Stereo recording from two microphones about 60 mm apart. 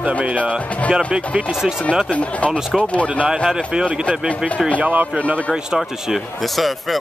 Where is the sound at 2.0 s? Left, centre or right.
Left.